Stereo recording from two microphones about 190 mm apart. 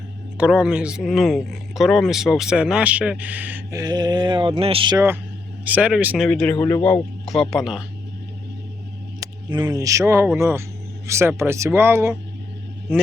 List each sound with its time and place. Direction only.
0.3 s speech: 5° right (ahead or behind); by 4.9 s 30° right (ahead or behind)
4.9 s speech: 10° right (ahead or behind)
6.2 s speech: 5° left (ahead or behind)
9.2 s speech: 20° right (ahead or behind)